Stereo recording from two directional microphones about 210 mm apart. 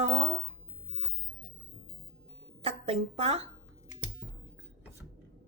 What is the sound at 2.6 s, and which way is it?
Speech, 30° right (ahead or behind).